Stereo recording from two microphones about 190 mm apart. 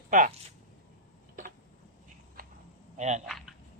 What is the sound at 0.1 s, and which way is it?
Speech, 40° right (ahead or behind).